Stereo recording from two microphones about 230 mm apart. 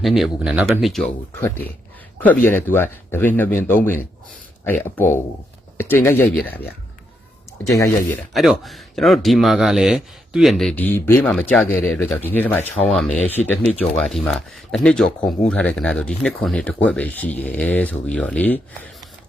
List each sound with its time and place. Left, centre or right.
0.0 s speech: centre
8.3 s speech: centre